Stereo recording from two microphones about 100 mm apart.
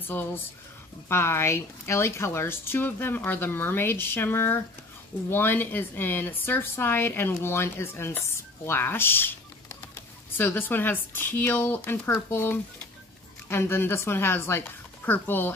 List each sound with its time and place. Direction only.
0.0 s a woman's voice: 20° left (ahead or behind)